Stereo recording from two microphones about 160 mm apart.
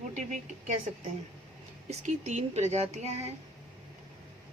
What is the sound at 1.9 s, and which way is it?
Speech, 45° right (ahead or behind).